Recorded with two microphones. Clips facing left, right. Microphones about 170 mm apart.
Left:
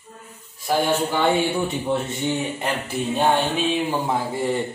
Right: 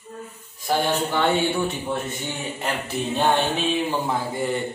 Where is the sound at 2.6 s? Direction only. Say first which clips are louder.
Left 1 dB; 10° left (ahead or behind).